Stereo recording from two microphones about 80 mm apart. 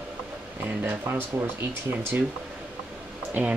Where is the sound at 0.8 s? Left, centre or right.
Right.